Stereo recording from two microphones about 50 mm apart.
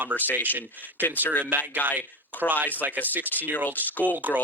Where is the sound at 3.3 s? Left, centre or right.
Left.